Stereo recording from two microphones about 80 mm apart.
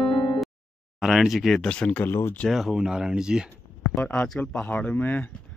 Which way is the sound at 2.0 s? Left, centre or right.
Left.